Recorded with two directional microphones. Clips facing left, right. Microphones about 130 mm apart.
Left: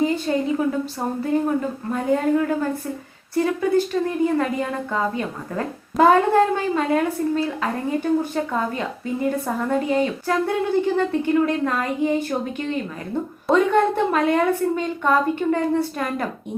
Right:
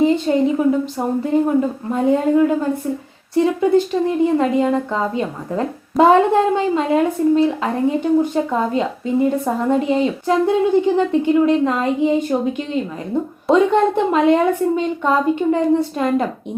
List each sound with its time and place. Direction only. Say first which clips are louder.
0.0 s a woman's voice: right 6 dB; 25° right (ahead or behind)